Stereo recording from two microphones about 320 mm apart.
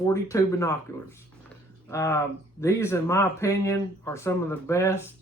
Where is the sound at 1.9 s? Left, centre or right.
Centre.